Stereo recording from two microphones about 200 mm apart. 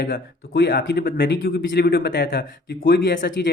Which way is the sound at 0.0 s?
50° left (ahead or behind).